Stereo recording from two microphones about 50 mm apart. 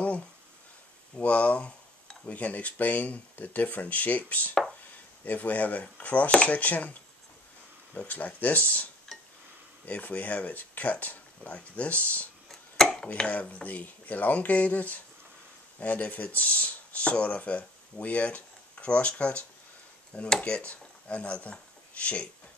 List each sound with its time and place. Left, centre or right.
1.2 s speech: left
8.1 s speech: left
9.1 s dishes: centre
9.8 s speech: left
12.4 s chopping: centre
13.3 s speech: left